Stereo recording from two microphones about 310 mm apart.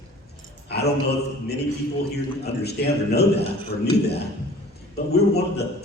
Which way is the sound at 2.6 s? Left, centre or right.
Left.